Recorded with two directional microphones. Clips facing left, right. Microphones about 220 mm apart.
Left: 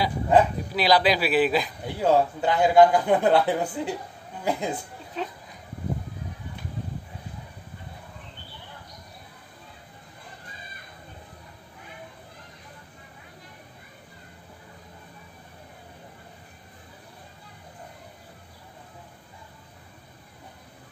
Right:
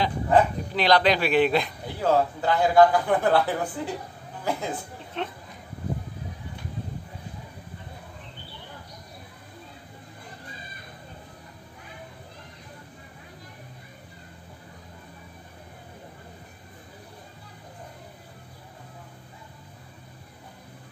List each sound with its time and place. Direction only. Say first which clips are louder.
0.0 s speech: left 1 dB; 10° left (ahead or behind)
2.0 s a man's voice: left 1 dB; 15° left (ahead or behind)
5.1 s a sound: even; centre (ahead or behind)